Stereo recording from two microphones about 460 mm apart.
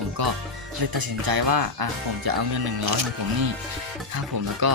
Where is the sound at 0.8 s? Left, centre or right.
Right.